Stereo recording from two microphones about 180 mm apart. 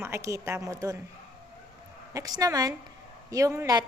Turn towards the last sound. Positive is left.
turn(degrees=-15)  # may be behind; listen again after turning